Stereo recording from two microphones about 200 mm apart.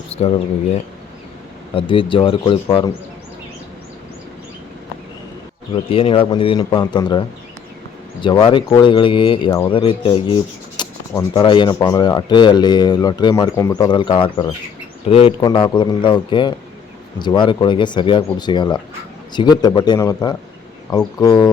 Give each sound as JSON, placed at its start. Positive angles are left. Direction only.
{"t": 0.1, "sound": "speech", "side_deg": 30}
{"t": 1.7, "sound": "rub", "side_deg": 25}
{"t": 5.9, "sound": "rub", "side_deg": 25}